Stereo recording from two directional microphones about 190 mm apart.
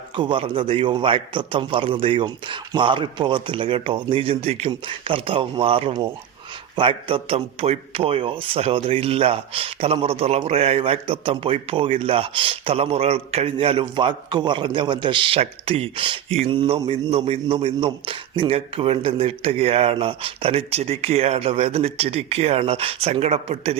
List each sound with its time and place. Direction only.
0.2 s a man's voice: 25° right (ahead or behind)